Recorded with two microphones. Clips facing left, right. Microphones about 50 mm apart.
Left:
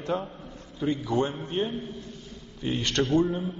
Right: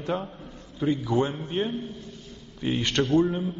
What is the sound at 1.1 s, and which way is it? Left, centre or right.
A man's voice, centre.